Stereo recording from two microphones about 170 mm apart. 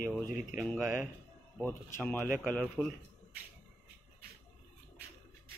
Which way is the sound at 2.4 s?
10° right (ahead or behind).